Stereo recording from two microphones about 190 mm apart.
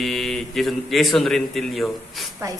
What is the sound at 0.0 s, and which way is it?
A man's voice, centre (ahead or behind).